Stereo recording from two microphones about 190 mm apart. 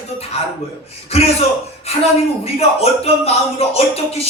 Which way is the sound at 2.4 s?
35° left (ahead or behind).